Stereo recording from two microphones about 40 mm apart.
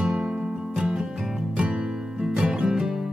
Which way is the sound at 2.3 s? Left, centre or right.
Right.